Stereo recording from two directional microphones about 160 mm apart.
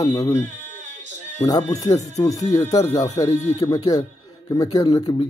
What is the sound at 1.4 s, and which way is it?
Speech, 20° left (ahead or behind).